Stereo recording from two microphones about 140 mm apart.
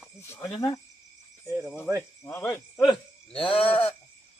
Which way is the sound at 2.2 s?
15° left (ahead or behind).